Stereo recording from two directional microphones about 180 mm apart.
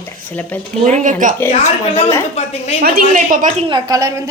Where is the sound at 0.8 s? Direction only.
45° right (ahead or behind).